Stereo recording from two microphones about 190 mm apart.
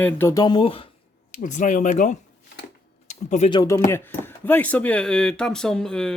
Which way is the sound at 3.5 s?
20° left (ahead or behind).